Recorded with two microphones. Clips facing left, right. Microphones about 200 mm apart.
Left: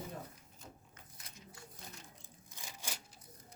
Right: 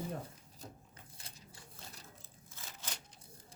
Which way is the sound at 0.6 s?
35° right (ahead or behind).